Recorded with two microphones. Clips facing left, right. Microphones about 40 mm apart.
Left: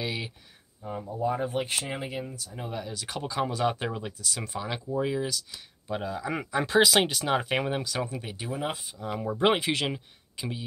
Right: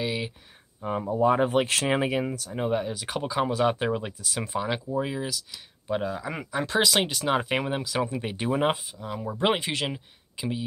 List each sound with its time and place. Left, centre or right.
0.0 s a sound: centre
0.7 s speech: right
2.5 s speech: right; by 6.3 s centre
6.3 s speech: centre
8.2 s speech: right
9.1 s speech: centre
9.4 s speech: centre